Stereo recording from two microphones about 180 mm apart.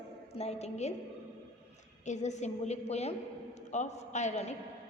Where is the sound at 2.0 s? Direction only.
40° left (ahead or behind).